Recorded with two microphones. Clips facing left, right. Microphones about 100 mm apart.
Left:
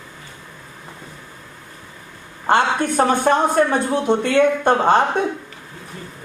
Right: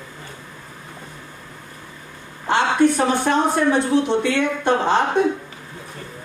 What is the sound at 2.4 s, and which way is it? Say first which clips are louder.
Speech: right 1 dB; 50° left (ahead or behind).